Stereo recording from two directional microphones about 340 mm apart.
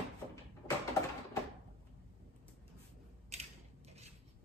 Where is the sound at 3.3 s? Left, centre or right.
Centre.